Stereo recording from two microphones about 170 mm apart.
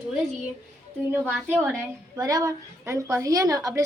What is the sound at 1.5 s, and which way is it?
Speech, 10° right (ahead or behind).